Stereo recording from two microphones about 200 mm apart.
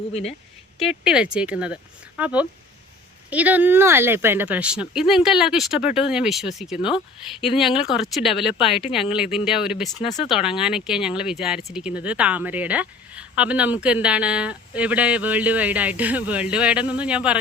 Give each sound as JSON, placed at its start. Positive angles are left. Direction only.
{"t": 0.1, "sound": "speech", "side_deg": 30}
{"t": 0.8, "sound": "speech", "side_deg": -5}
{"t": 8.5, "sound": "speech", "side_deg": 30}
{"t": 8.8, "sound": "speech", "side_deg": 0}
{"t": 10.0, "sound": "speech", "side_deg": 35}
{"t": 10.2, "sound": "speech", "side_deg": -5}